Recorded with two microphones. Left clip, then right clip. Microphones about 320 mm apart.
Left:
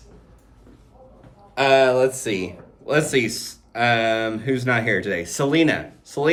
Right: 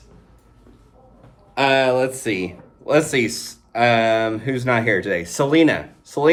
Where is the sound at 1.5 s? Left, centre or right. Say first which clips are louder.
Left 1 dB; right.